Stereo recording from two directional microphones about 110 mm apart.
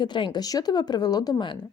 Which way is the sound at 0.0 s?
45° left (ahead or behind).